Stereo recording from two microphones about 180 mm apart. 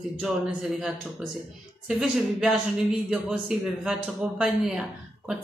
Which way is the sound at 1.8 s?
Centre (ahead or behind).